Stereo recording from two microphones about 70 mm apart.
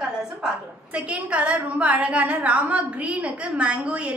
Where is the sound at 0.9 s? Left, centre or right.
Centre.